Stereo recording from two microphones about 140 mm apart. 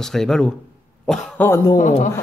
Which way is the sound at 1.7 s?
60° left (ahead or behind).